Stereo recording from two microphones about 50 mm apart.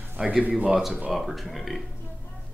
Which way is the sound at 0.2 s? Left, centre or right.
Right.